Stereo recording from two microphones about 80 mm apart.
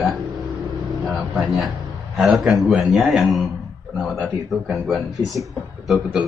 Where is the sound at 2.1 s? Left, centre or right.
Centre.